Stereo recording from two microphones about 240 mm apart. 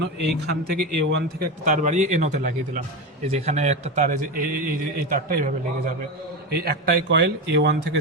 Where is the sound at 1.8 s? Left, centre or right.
Right.